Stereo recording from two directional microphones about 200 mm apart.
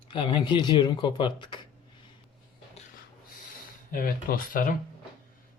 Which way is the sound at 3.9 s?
45° left (ahead or behind).